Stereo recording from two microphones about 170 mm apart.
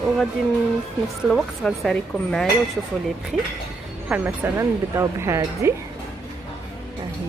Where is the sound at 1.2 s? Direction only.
Centre (ahead or behind).